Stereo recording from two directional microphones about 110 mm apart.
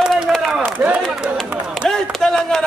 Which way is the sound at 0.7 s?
15° right (ahead or behind).